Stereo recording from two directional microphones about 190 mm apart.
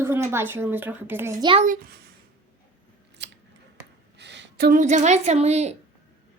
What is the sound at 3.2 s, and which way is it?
Scissors, 65° right (ahead or behind).